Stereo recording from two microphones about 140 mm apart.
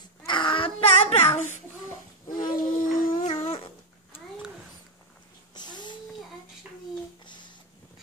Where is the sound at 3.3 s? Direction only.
45° left (ahead or behind).